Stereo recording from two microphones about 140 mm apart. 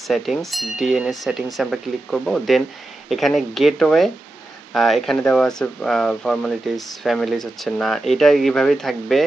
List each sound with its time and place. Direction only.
0.1 s speech: centre (ahead or behind)